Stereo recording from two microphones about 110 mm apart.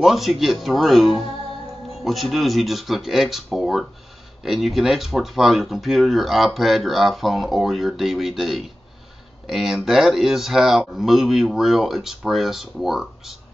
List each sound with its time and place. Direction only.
0.0 s speech: centre (ahead or behind)